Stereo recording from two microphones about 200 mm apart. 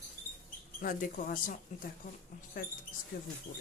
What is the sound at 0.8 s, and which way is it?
Speech, 45° left (ahead or behind).